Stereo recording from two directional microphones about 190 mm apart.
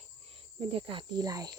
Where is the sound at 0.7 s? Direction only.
30° right (ahead or behind).